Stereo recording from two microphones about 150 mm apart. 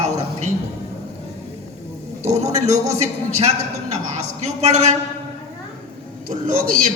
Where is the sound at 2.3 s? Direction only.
50° right (ahead or behind).